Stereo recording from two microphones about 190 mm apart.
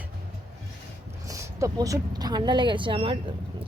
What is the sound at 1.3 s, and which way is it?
Speech, 15° right (ahead or behind).